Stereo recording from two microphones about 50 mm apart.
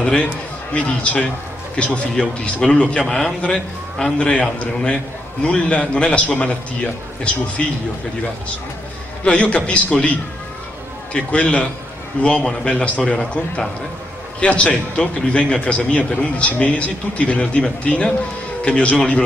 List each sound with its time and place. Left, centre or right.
0.0 s a man's voice: left
3.1 s a man's voice: centre
4.3 s a man's voice: left
9.2 s a man's voice: left
11.1 s a man's voice: left